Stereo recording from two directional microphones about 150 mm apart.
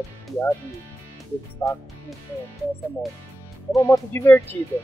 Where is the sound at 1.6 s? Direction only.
15° left (ahead or behind).